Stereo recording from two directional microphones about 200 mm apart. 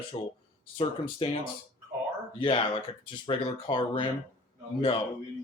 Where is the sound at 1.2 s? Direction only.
30° left (ahead or behind).